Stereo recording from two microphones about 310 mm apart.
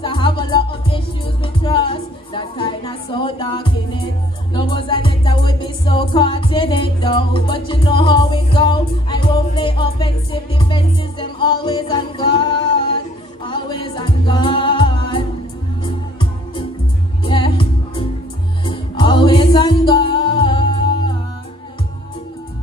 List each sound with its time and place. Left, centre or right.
0.0 s music: centre